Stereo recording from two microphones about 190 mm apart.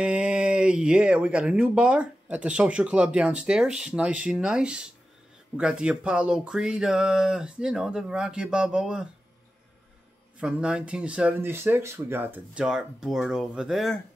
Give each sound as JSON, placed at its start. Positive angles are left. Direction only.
{"t": 0.0, "sound": "speech", "side_deg": -5}
{"t": 10.4, "sound": "speech", "side_deg": -5}